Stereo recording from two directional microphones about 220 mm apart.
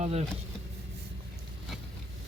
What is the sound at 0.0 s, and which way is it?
Speech, 30° right (ahead or behind).